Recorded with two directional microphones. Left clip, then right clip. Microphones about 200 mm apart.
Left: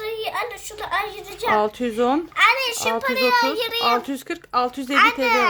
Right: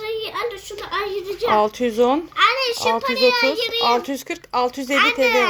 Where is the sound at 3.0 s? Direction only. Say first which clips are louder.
Even; 45° left (ahead or behind).